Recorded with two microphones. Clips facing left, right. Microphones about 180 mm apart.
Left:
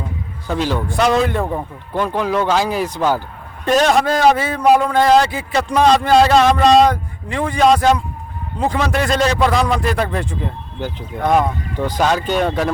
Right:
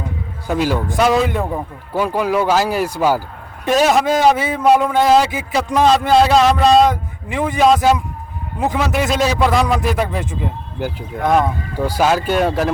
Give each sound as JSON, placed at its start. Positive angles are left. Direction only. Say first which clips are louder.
{"t": 0.4, "sound": "a man's voice", "louder": "right 2 dB", "side_deg": -10}
{"t": 8.5, "sound": "a man's voice", "louder": "even", "side_deg": -20}
{"t": 8.8, "sound": "a man's voice", "louder": "even", "side_deg": -5}